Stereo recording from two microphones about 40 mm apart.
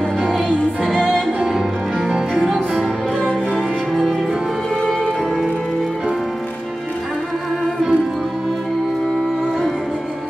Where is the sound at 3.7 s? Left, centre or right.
Right.